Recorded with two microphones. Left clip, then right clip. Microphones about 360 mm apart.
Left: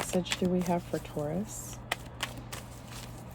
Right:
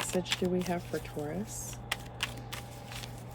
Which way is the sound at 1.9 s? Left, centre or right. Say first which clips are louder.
Even; centre.